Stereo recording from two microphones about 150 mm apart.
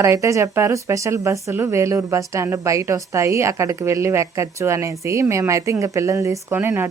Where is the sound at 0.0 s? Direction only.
20° right (ahead or behind).